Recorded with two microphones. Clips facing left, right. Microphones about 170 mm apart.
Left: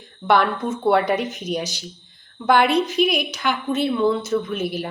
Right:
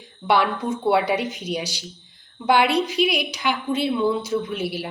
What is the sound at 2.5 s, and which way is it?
Speech, 50° left (ahead or behind).